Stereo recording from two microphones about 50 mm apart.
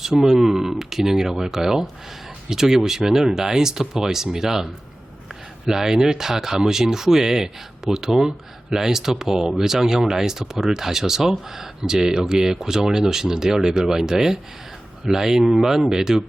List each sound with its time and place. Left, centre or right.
0.2 s speech: centre